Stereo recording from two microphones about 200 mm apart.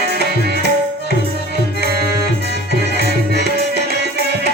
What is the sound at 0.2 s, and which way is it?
Tabla, 55° right (ahead or behind).